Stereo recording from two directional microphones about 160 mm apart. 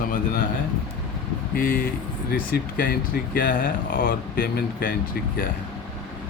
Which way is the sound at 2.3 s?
65° left (ahead or behind).